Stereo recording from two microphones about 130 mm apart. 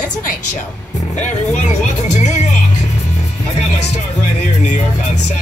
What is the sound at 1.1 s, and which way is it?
Speech, 65° left (ahead or behind).